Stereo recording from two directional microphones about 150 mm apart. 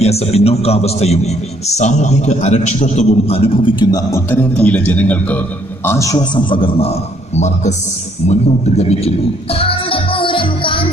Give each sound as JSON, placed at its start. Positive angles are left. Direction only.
{"t": 0.0, "sound": "a man's voice", "side_deg": 45}
{"t": 4.3, "sound": "a man's voice", "side_deg": 10}
{"t": 5.9, "sound": "a man's voice", "side_deg": 20}
{"t": 8.3, "sound": "music", "side_deg": 45}